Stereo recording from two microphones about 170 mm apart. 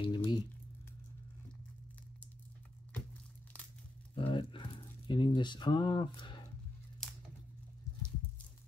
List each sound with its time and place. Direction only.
0.0 s crumpling: 25° left (ahead or behind)
4.1 s a sound: 30° left (ahead or behind)
7.0 s crumpling: 5° left (ahead or behind)